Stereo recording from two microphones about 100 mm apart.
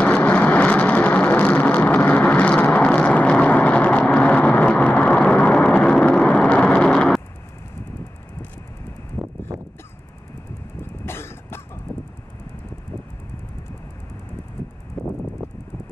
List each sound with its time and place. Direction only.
0.0 s vehicle: 15° left (ahead or behind)
9.2 s a sound: 15° right (ahead or behind)
11.1 s cough: 25° left (ahead or behind)
15.0 s vehicle: 5° left (ahead or behind)